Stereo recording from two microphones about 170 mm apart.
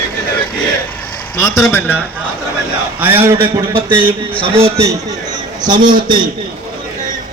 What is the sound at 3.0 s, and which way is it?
Speech, 10° right (ahead or behind).